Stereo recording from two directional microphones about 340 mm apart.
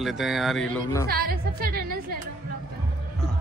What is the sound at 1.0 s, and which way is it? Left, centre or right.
Speech, right.